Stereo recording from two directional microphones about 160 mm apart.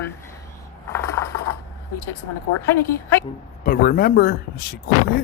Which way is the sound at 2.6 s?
15° left (ahead or behind).